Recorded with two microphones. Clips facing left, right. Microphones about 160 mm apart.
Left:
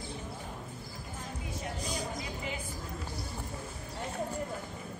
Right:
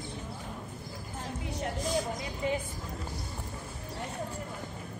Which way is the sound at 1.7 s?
Centre (ahead or behind).